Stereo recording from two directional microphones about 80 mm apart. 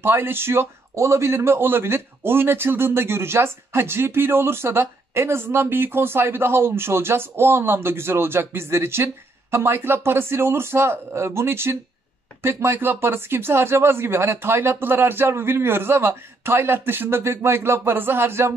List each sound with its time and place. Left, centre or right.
0.0 s a man's voice: right